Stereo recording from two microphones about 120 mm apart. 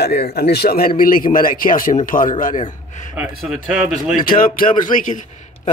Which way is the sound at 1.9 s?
90° left.